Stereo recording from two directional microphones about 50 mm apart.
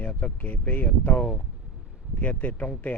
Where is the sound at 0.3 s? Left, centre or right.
Left.